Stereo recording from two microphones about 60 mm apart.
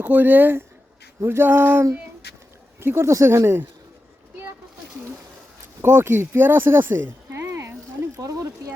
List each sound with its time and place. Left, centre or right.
0.0 s speech: right
1.2 s speech: right
1.5 s speech: right
2.8 s speech: right
3.2 s speech: right
5.8 s speech: right
7.3 s a sound: right
8.1 s a sound: right